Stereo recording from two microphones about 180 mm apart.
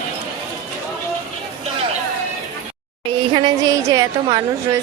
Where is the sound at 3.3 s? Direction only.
20° right (ahead or behind).